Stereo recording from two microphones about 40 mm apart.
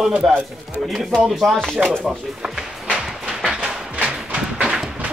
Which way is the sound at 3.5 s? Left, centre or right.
Right.